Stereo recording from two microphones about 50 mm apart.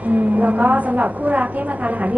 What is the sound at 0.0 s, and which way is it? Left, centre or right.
A woman's voice, right.